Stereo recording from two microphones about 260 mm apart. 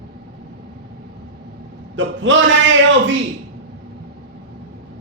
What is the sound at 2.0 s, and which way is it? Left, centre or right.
A man's voice, right.